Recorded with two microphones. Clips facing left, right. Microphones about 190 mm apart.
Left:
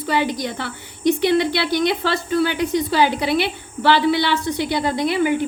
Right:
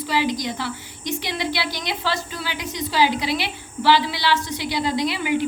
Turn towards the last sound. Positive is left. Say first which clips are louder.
# left 3 dB
turn(degrees=50)  # may be behind; listen again after turning